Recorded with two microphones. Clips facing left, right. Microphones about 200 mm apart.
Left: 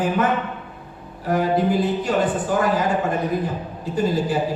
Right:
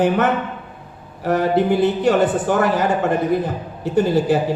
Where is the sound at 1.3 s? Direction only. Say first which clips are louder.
Right 3 dB; 70° right (ahead or behind).